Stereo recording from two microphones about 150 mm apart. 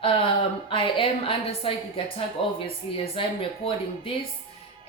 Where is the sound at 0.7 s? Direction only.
35° left (ahead or behind).